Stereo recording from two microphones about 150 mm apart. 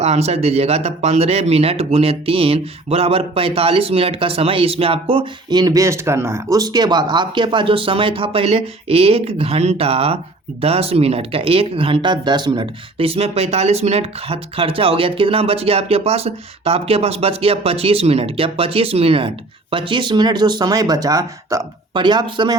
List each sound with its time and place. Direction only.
0.0 s speech: 45° right (ahead or behind); by 22.5 s 30° right (ahead or behind)